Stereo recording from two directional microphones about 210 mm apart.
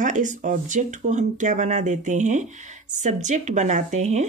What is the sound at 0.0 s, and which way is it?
Speech, 35° right (ahead or behind).